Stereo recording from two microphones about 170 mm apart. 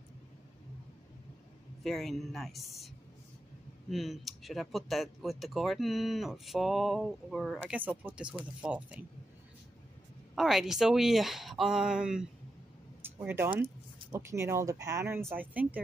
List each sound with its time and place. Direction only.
1.8 s speech: centre (ahead or behind)
3.9 s speech: centre (ahead or behind)
10.3 s speech: centre (ahead or behind)
13.0 s a sound: 10° right (ahead or behind)
14.1 s speech: 15° right (ahead or behind)